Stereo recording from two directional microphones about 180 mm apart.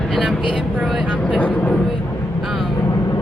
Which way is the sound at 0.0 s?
Centre (ahead or behind).